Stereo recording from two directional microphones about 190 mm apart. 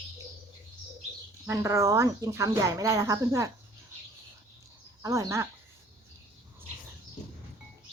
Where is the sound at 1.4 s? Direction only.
15° right (ahead or behind).